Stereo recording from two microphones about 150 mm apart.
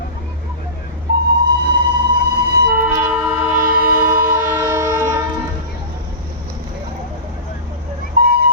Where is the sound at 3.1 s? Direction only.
10° right (ahead or behind).